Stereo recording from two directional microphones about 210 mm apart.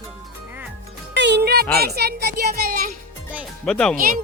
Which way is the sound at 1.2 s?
55° right (ahead or behind).